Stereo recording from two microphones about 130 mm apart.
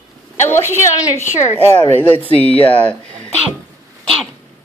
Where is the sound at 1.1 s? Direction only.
20° left (ahead or behind).